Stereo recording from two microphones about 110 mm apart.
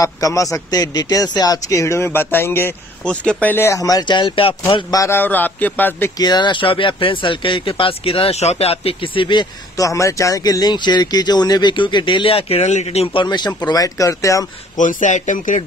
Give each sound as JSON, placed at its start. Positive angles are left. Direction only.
{"t": 0.0, "sound": "speech", "side_deg": 30}
{"t": 4.9, "sound": "a man's voice", "side_deg": 25}
{"t": 6.1, "sound": "speech", "side_deg": 40}
{"t": 9.8, "sound": "speech", "side_deg": 30}
{"t": 15.1, "sound": "speech", "side_deg": 90}